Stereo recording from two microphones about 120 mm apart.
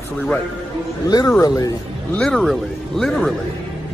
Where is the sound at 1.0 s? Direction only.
30° left (ahead or behind).